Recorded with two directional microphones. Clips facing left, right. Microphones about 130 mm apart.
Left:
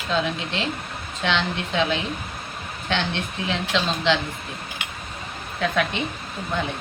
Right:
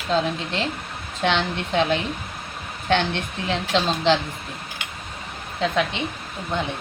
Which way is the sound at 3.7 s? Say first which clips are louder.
Right 3 dB; 40° right (ahead or behind).